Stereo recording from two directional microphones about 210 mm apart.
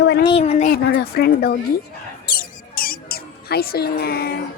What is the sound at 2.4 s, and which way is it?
Mouse, 45° left (ahead or behind).